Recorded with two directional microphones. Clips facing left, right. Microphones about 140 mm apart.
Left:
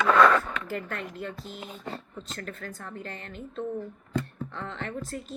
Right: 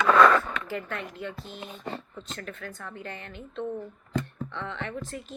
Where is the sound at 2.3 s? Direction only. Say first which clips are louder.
Even; 40° left (ahead or behind).